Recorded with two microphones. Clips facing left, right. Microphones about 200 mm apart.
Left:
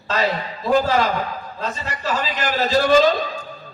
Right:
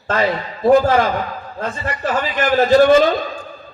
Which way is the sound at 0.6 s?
50° right (ahead or behind).